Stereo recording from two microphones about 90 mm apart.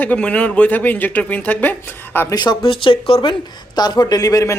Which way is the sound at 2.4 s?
60° left (ahead or behind).